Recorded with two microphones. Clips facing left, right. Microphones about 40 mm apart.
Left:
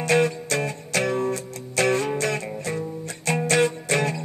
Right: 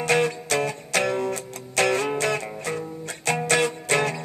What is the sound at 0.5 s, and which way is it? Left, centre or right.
Music, right.